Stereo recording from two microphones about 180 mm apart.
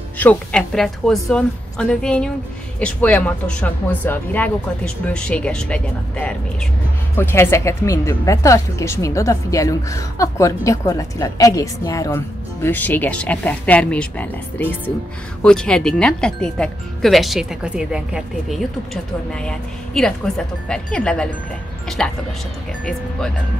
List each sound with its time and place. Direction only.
0.2 s speech: 5° left (ahead or behind)